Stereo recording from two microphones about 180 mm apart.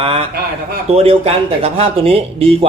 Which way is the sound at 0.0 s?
30° right (ahead or behind).